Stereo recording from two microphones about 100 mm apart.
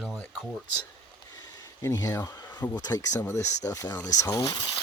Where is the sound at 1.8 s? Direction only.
35° left (ahead or behind).